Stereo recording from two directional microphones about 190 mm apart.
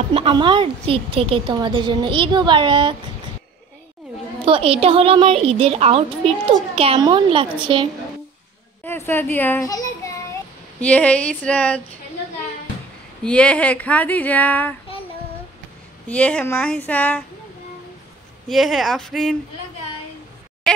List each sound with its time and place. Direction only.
0.1 s a woman's voice: 30° right (ahead or behind)
4.5 s a woman's voice: 30° right (ahead or behind)
8.8 s a child's voice: 10° left (ahead or behind)
10.8 s speech: 5° left (ahead or behind)
13.2 s speech: 5° left (ahead or behind)
16.1 s speech: 5° left (ahead or behind)
18.5 s speech: centre (ahead or behind)
20.7 s a sound: centre (ahead or behind)